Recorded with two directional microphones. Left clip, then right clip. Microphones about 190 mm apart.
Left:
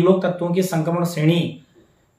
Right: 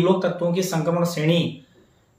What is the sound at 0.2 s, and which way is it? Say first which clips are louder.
Speech: left 1 dB; 20° left (ahead or behind).